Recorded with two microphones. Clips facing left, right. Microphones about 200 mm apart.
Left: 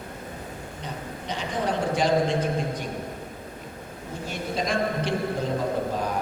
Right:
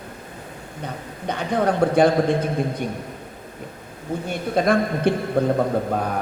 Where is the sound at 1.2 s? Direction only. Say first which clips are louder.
Right 7 dB; 55° right (ahead or behind).